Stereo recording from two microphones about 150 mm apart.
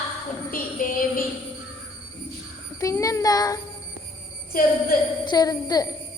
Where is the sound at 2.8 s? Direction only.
20° left (ahead or behind).